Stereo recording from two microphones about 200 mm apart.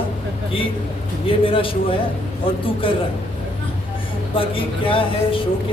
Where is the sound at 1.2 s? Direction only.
25° left (ahead or behind).